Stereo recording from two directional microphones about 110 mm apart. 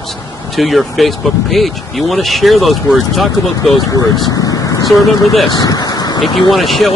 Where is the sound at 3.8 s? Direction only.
30° left (ahead or behind).